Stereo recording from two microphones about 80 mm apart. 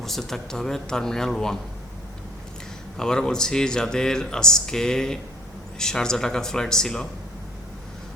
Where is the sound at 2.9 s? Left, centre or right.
Centre.